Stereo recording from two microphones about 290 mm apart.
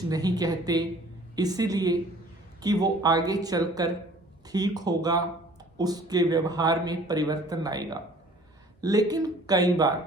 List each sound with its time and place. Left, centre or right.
0.1 s speech: centre